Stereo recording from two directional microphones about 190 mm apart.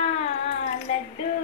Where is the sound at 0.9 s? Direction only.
35° left (ahead or behind).